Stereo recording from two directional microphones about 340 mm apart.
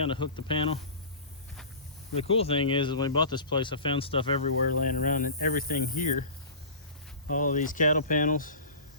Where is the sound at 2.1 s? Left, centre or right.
Centre.